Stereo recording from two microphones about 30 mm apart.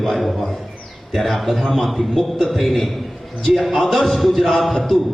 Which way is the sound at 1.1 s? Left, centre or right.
Centre.